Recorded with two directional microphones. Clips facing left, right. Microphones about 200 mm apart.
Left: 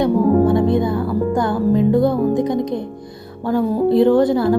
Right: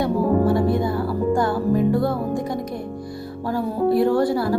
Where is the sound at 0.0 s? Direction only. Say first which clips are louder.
Left 5 dB; 20° left (ahead or behind).